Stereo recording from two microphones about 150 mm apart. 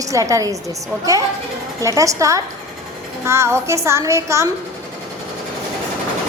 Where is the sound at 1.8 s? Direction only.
20° right (ahead or behind).